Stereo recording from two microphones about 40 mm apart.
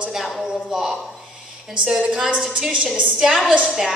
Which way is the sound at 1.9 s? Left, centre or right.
Centre.